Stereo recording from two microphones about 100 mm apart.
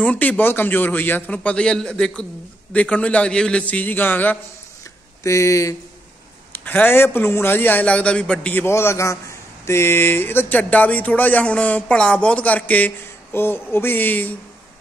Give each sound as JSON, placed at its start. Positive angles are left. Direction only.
{"t": 0.0, "sound": "speech", "side_deg": 15}
{"t": 5.2, "sound": "speech", "side_deg": 30}
{"t": 6.5, "sound": "a man's voice", "side_deg": 20}
{"t": 8.6, "sound": "a man's voice", "side_deg": 25}